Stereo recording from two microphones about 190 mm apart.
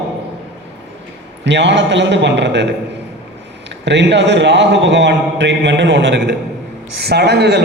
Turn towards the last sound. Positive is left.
turn(degrees=-60)  # may be behind; listen again after turning